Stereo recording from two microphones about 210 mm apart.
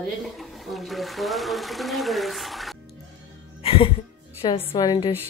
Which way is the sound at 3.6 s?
25° left (ahead or behind).